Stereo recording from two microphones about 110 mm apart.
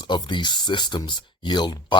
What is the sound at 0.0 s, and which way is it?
Speech, 45° left (ahead or behind).